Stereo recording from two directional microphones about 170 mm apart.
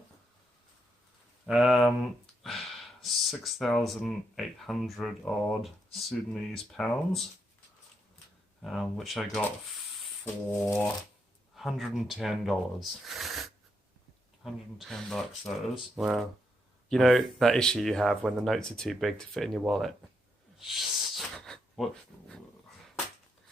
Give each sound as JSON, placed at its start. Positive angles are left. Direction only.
{"t": 1.5, "sound": "speech", "side_deg": -5}
{"t": 8.6, "sound": "speech", "side_deg": 0}
{"t": 11.5, "sound": "speech", "side_deg": 0}
{"t": 20.6, "sound": "gasp", "side_deg": 0}